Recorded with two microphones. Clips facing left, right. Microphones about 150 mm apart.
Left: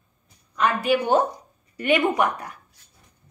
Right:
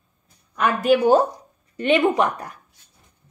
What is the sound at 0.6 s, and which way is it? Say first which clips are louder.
Speech: right 3 dB; 40° right (ahead or behind).